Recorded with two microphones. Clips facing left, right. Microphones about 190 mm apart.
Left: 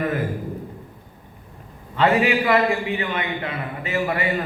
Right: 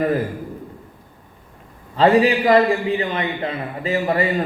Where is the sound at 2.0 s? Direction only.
35° right (ahead or behind).